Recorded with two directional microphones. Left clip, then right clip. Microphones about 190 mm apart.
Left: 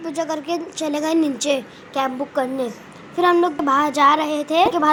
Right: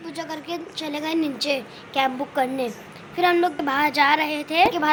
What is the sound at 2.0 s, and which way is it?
A woman's voice, 5° left (ahead or behind).